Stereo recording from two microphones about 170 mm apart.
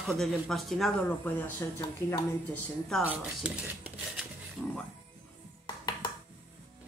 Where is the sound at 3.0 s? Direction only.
10° right (ahead or behind).